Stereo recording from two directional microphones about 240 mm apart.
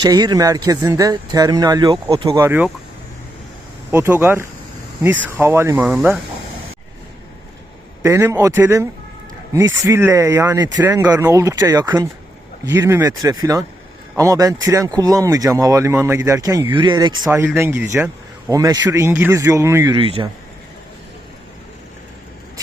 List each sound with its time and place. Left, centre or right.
0.0 s speech: centre
3.9 s speech: centre
8.0 s speech: centre